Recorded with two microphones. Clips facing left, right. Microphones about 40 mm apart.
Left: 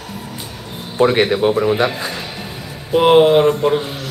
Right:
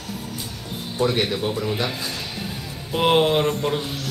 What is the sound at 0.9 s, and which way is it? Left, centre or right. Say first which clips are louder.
A man's voice: left 8 dB; left.